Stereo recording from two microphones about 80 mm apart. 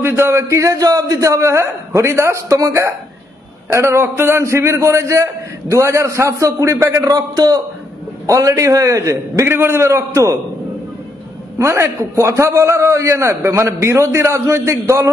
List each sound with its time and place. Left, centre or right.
0.0 s a man's voice: right
8.3 s a man's voice: right
11.5 s a man's voice: right